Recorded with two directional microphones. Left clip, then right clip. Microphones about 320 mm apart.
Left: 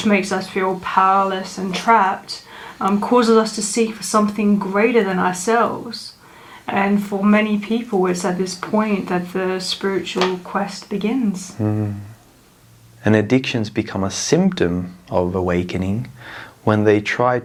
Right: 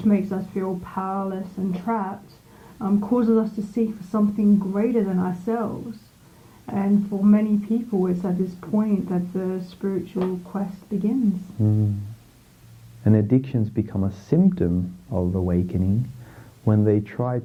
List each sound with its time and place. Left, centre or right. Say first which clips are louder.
0.0 s speech: left 7 dB; centre
13.1 s speech: left 6 dB; centre